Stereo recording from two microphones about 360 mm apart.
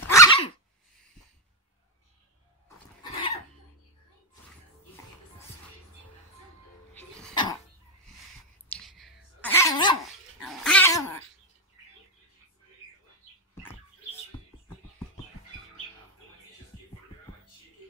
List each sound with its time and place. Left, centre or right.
0.1 s dog: centre
3.0 s cough: centre
6.9 s music: centre
8.6 s dog: centre
10.4 s cat: centre